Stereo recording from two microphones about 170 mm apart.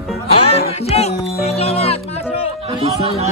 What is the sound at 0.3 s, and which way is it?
Music, 35° left (ahead or behind).